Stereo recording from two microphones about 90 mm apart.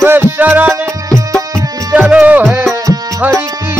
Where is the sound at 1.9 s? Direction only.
15° right (ahead or behind).